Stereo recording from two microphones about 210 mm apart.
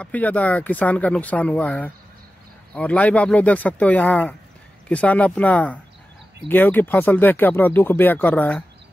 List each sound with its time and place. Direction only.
0.0 s speech: 5° left (ahead or behind)